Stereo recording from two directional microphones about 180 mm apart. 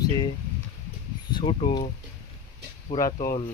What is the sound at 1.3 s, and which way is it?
Speech, 25° left (ahead or behind).